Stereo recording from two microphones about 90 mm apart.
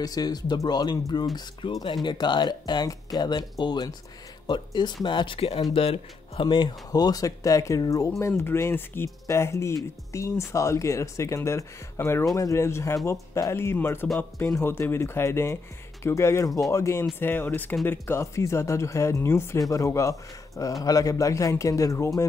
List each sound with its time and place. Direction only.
0.0 s speech: 45° left (ahead or behind)
1.6 s speech: 65° left (ahead or behind)
5.7 s speech: 90° left
6.4 s speech: 55° left (ahead or behind); by 22.2 s 35° left (ahead or behind)